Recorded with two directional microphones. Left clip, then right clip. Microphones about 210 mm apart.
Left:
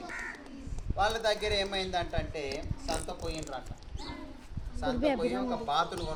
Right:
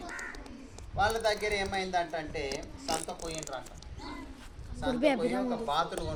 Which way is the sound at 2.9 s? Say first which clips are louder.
Right 1 dB; 20° right (ahead or behind).